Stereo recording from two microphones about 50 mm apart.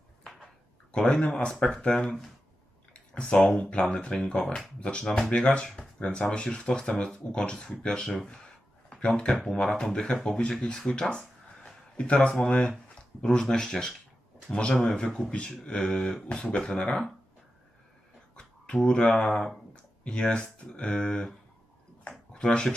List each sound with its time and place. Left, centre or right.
0.9 s speech: centre
2.9 s speech: centre
8.1 s speech: centre
8.9 s speech: centre
10.5 s a sound: centre
12.0 s speech: left
18.3 s speech: centre
20.1 s speech: left
22.3 s a sound: centre